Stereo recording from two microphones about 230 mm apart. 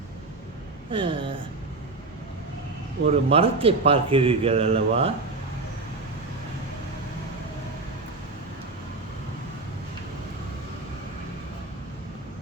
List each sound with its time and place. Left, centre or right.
0.9 s speech: right
3.1 s speech: right